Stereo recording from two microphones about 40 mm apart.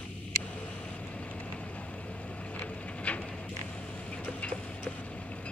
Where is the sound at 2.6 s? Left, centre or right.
Left.